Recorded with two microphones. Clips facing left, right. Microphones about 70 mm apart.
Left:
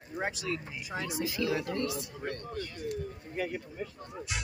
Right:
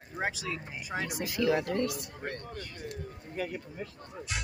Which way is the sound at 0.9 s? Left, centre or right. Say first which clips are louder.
Right 1 dB; right.